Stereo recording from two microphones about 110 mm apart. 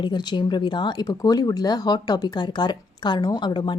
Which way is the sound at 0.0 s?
45° left (ahead or behind).